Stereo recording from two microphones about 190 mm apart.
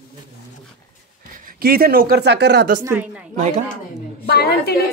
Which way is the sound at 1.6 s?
55° right (ahead or behind).